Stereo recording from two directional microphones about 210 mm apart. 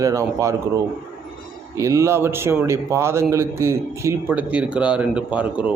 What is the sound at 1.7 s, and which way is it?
A man's voice, 15° right (ahead or behind).